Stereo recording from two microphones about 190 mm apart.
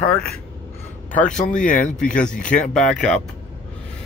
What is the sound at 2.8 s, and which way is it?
Speech, 5° left (ahead or behind).